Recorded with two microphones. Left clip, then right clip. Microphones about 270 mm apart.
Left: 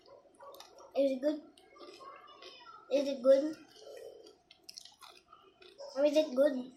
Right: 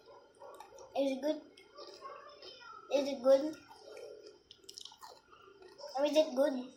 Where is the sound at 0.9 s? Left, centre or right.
Left.